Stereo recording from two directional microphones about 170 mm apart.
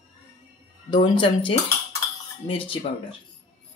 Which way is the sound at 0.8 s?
25° left (ahead or behind).